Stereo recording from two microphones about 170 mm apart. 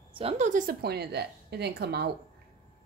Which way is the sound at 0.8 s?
70° right (ahead or behind).